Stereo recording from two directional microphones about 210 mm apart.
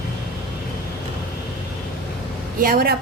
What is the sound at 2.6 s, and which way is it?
Speech, 45° right (ahead or behind).